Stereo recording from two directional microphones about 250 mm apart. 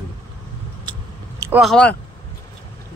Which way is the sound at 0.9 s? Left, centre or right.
Centre.